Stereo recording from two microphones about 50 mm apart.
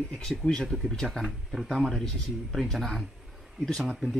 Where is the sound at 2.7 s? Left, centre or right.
Centre.